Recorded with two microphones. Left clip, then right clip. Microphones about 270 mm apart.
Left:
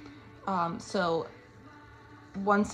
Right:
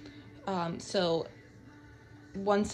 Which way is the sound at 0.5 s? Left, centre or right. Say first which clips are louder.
Left 2 dB; right.